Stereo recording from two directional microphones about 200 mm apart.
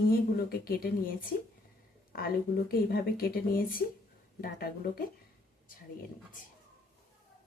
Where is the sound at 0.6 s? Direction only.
45° left (ahead or behind).